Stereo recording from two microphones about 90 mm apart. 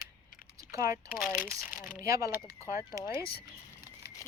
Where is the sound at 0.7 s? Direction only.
35° right (ahead or behind).